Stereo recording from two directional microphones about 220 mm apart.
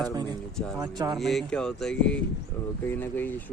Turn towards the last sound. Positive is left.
turn(degrees=10)  # may be behind; listen again after turning